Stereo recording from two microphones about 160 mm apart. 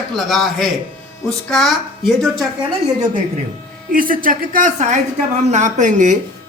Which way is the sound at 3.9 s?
60° right (ahead or behind).